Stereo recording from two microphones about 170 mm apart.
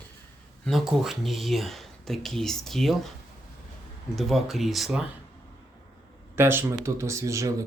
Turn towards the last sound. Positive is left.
turn(degrees=-20)  # may be behind; listen again after turning